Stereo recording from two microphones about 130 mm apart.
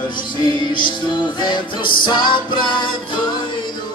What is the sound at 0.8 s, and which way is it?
Music, 35° left (ahead or behind).